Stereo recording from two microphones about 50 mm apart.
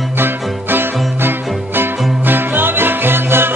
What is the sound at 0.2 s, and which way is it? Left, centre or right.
Music, right.